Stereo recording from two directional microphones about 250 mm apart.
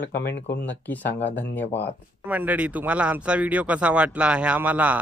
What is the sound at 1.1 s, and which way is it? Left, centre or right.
Speech, left.